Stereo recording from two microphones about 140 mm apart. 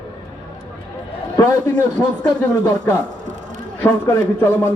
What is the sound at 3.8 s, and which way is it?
Speech, 15° left (ahead or behind).